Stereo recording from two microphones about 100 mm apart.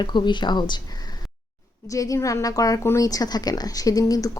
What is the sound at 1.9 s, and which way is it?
Speech, 35° left (ahead or behind).